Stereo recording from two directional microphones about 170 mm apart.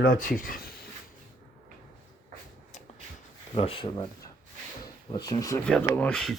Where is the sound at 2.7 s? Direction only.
45° left (ahead or behind).